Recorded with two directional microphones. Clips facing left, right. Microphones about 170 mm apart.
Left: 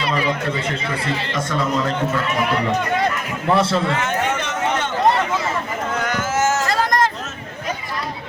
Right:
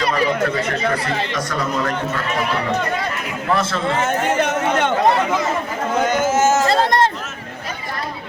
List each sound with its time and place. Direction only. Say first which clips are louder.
3.5 s a man's voice: left 2 dB; 30° left (ahead or behind)
4.4 s run: right 4 dB; 60° right (ahead or behind)
6.0 s vehicle: right 5 dB; 20° right (ahead or behind)